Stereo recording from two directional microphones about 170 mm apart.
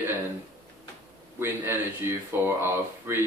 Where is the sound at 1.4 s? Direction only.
15° right (ahead or behind).